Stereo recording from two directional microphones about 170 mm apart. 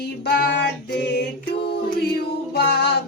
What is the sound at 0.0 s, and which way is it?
Child singing, 70° left (ahead or behind).